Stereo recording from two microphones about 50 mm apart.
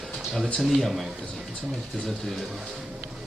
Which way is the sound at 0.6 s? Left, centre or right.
Centre.